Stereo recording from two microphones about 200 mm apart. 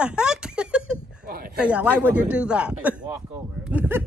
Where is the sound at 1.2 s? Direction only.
45° right (ahead or behind).